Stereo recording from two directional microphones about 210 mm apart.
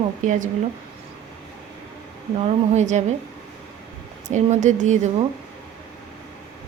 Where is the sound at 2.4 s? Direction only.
35° right (ahead or behind).